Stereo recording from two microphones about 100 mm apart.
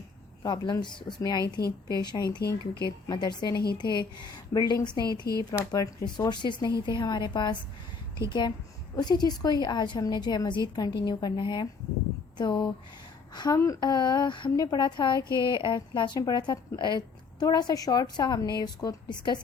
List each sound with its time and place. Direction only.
0.4 s a woman's voice: 45° left (ahead or behind)
5.5 s a woman's voice: 35° left (ahead or behind)